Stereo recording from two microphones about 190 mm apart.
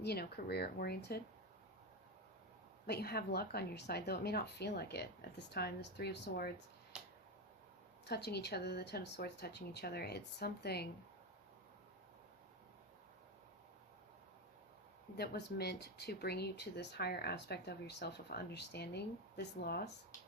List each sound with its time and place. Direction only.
0.0 s speech: 60° left (ahead or behind)
2.8 s speech: 55° left (ahead or behind)
6.9 s finger snapping: 5° right (ahead or behind)
8.0 s speech: 60° left (ahead or behind)
15.1 s speech: 60° left (ahead or behind)